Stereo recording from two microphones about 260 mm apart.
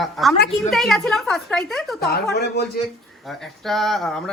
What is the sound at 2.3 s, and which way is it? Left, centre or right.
Speech, left.